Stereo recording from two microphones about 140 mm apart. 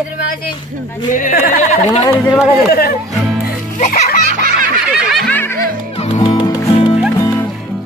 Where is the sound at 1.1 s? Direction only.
80° left.